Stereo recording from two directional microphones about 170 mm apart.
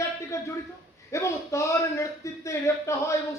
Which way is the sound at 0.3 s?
15° left (ahead or behind).